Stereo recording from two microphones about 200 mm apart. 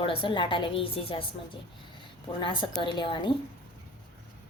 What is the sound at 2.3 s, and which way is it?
Speech, 25° left (ahead or behind).